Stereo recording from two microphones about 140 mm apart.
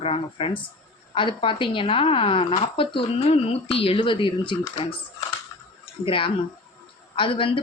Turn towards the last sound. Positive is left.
turn(degrees=40)  # may be behind; listen again after turning